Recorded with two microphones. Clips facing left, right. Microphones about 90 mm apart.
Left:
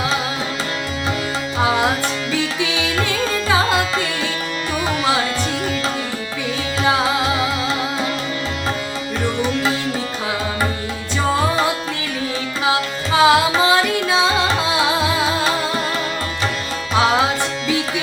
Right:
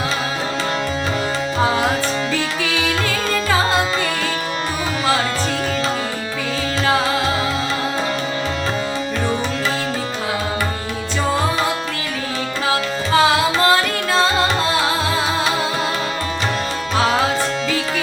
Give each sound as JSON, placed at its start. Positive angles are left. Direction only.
{"t": 13.1, "sound": "carnatic music", "side_deg": 10}